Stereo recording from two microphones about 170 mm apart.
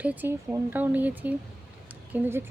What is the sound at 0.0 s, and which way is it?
Speech, 10° right (ahead or behind).